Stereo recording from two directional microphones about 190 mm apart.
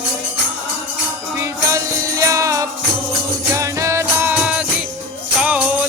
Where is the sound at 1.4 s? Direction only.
15° right (ahead or behind).